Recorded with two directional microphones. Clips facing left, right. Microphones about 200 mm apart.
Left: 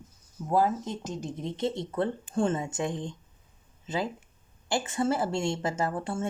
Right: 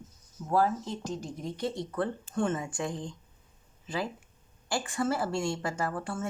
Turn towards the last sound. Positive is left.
turn(degrees=25)  # may be behind; listen again after turning